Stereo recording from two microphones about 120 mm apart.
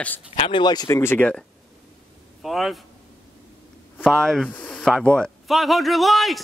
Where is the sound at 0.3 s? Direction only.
45° left (ahead or behind).